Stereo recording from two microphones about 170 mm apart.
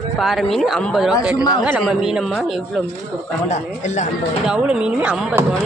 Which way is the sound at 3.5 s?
45° left (ahead or behind).